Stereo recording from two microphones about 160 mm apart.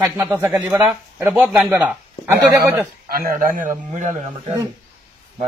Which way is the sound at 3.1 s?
65° right (ahead or behind).